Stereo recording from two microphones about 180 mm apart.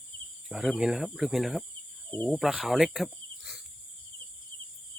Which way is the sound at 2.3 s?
Centre (ahead or behind).